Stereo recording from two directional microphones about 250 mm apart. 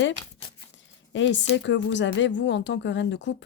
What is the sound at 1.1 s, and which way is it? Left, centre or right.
Speech, left.